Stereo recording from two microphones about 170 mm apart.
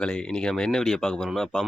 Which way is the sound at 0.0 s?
5° left (ahead or behind).